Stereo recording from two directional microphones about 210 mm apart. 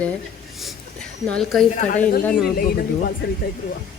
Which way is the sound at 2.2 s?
Centre (ahead or behind).